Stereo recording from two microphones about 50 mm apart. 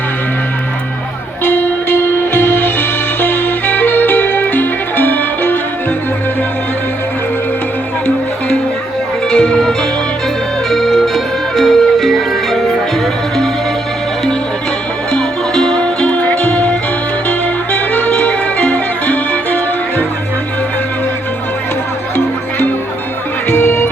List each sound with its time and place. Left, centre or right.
1.5 s music: left
9.3 s music: centre
15.1 s music: centre; by 20.1 s left
22.1 s music: left